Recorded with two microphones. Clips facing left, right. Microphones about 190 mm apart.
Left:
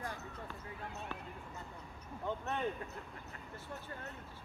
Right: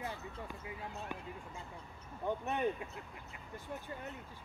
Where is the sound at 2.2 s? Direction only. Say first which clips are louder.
Right 3 dB; 15° right (ahead or behind).